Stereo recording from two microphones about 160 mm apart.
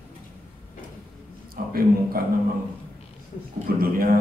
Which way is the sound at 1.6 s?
70° right (ahead or behind).